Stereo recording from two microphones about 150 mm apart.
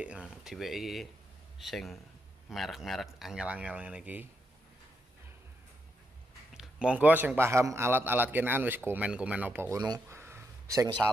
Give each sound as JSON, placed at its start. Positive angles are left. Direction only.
{"t": 0.0, "sound": "a man's voice", "side_deg": -5}
{"t": 6.5, "sound": "a man's voice", "side_deg": -5}
{"t": 9.8, "sound": "a sound", "side_deg": -25}